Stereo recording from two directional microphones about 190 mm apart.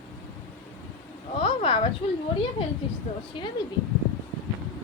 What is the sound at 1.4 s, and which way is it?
Speech, 30° left (ahead or behind).